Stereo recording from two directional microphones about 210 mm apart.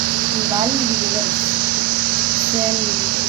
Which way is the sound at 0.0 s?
40° right (ahead or behind).